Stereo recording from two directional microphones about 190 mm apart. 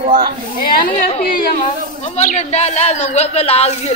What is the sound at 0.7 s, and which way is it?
Speech, 45° left (ahead or behind).